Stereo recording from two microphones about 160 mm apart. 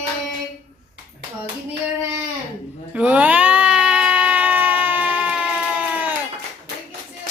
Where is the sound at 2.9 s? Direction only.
10° right (ahead or behind).